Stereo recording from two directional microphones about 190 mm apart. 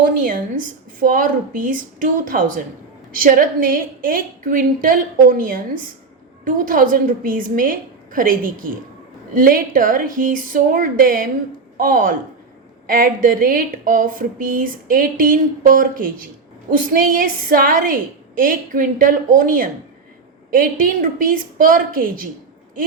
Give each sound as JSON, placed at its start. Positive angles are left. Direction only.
{"t": 0.0, "sound": "speech", "side_deg": -45}